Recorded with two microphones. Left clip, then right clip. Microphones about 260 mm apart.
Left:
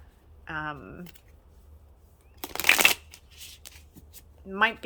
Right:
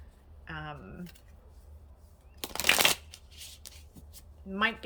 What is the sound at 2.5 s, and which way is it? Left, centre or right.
Shuffling cards, centre.